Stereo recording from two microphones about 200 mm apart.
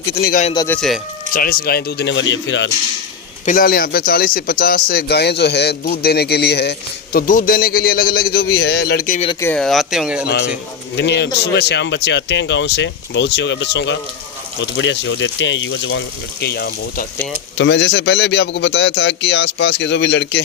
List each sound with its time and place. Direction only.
0.2 s a man's voice: 45° left (ahead or behind)
0.5 s speech: 15° left (ahead or behind)
0.8 s speech: centre (ahead or behind)
1.3 s a man's voice: 45° left (ahead or behind); by 2.6 s 65° left (ahead or behind)
3.4 s a man's voice: 45° left (ahead or behind)
9.4 s speech: 5° left (ahead or behind)
10.9 s speech: 60° left (ahead or behind)